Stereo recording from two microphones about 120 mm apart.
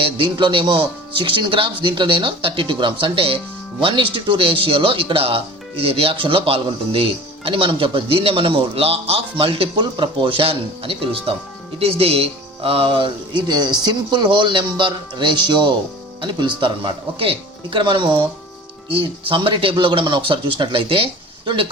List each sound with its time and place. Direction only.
0.0 s speech: 40° right (ahead or behind)